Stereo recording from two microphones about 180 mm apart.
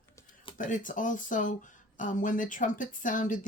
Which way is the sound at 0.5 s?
45° left (ahead or behind).